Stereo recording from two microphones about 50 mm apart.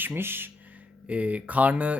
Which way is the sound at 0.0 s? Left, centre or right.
Right.